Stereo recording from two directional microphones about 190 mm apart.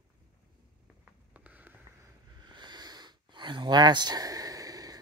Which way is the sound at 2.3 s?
25° right (ahead or behind).